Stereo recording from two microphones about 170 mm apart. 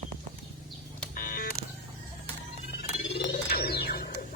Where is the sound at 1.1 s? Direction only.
55° left (ahead or behind).